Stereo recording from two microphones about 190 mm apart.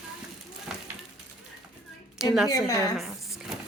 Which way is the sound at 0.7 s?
Centre (ahead or behind).